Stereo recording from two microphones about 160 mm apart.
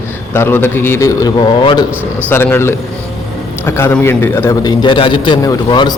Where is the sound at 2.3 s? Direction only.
15° left (ahead or behind).